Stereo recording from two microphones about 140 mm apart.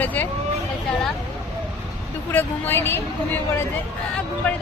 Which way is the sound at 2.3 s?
15° left (ahead or behind).